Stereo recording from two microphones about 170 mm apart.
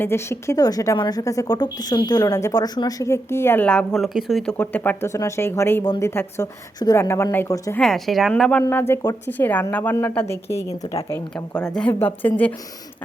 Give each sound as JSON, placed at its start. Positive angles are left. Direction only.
{"t": 0.0, "sound": "a woman's voice", "side_deg": 15}
{"t": 4.5, "sound": "a woman's voice", "side_deg": 10}
{"t": 7.8, "sound": "a woman's voice", "side_deg": 0}